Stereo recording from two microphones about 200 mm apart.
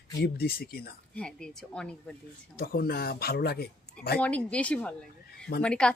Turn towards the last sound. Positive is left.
turn(degrees=5)  # may be behind; listen again after turning